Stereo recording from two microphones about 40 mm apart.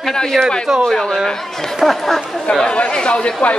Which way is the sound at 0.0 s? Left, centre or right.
Centre.